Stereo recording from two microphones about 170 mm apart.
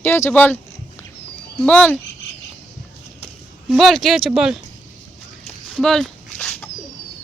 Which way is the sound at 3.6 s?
Centre (ahead or behind).